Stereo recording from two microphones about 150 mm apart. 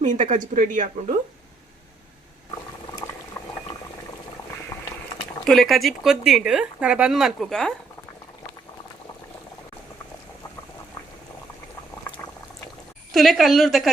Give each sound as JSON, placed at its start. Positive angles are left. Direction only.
{"t": 0.0, "sound": "speech", "side_deg": -50}
{"t": 5.5, "sound": "speech", "side_deg": 0}
{"t": 13.1, "sound": "speech", "side_deg": 0}